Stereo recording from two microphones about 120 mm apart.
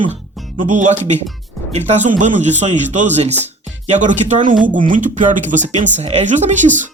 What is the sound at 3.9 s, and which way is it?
Speech, 90° right.